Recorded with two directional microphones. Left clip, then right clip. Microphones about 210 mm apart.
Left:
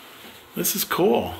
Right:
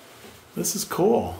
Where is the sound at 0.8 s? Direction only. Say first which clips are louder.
Left 1 dB; 15° right (ahead or behind).